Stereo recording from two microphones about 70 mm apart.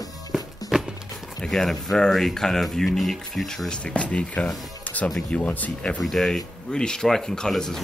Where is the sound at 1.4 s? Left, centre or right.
Centre.